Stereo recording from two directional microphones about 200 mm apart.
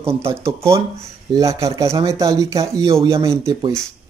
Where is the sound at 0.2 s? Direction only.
15° right (ahead or behind).